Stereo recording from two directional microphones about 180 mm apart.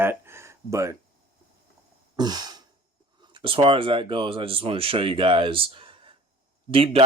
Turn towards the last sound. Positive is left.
turn(degrees=-30)  # may be behind; listen again after turning